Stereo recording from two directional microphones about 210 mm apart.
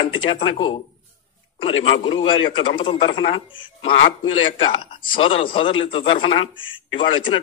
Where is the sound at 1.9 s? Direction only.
25° left (ahead or behind).